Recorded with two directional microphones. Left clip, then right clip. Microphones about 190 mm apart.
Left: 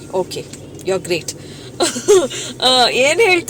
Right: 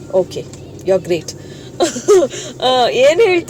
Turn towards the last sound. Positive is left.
turn(degrees=-10)  # may be behind; listen again after turning